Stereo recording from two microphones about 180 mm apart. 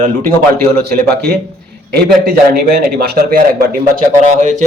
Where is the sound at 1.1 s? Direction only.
60° right (ahead or behind).